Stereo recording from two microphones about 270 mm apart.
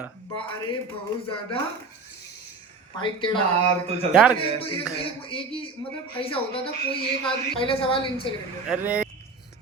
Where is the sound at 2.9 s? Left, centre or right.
Centre.